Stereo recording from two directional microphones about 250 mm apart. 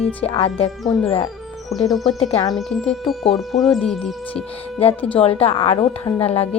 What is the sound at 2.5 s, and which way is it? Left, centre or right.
Speech, centre.